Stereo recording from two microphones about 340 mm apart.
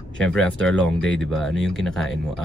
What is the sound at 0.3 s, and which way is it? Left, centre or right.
Speech, centre.